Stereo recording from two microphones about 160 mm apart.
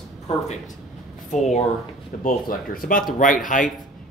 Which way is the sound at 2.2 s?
60° left (ahead or behind).